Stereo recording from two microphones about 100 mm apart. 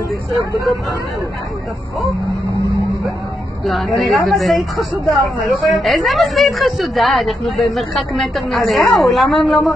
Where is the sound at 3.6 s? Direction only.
Centre (ahead or behind).